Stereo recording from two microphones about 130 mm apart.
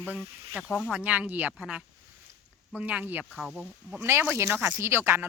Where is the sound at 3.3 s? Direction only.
Centre (ahead or behind).